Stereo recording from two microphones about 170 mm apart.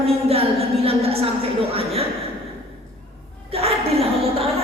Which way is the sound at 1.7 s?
35° right (ahead or behind).